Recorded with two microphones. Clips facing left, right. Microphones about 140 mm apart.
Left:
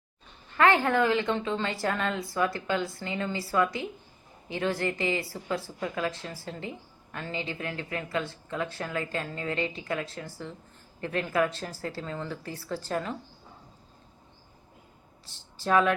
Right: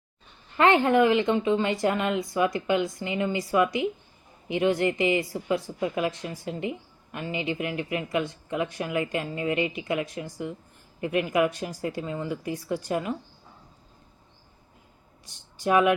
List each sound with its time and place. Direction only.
0.5 s a woman's voice: 20° right (ahead or behind)
15.3 s speech: 15° right (ahead or behind)